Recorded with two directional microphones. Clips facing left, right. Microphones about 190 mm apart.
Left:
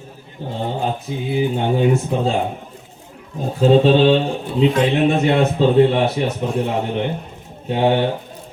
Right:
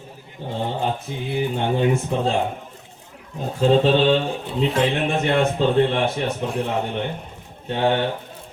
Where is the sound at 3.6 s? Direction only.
5° left (ahead or behind).